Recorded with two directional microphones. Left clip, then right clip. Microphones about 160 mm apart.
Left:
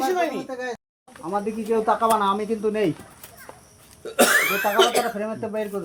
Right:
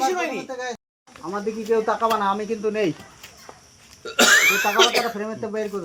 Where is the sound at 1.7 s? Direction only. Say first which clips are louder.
Left 1 dB; 90° left.